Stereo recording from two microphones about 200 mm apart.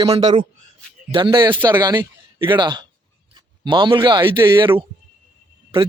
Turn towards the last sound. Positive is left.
turn(degrees=-25)  # may be behind; listen again after turning